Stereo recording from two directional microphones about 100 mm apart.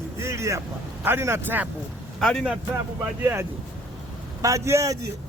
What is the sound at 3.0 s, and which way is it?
Speech, 20° right (ahead or behind).